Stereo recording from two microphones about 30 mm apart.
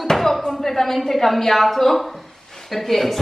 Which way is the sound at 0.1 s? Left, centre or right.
Centre.